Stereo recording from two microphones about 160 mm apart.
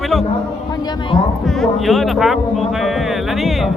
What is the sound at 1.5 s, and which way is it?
Speech, centre (ahead or behind).